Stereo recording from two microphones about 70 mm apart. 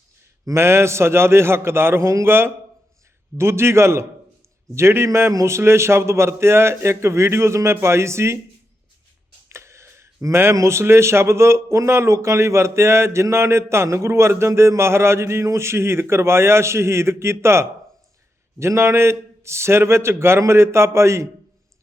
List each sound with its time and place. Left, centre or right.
0.4 s speech: right
9.5 s speech: right